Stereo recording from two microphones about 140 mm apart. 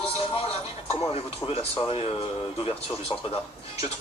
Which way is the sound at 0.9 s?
45° left (ahead or behind).